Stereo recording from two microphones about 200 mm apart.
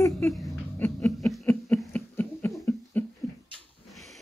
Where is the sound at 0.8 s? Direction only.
10° left (ahead or behind).